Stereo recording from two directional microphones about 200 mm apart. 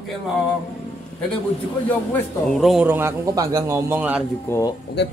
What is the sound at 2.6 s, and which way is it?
A man's voice, 5° right (ahead or behind).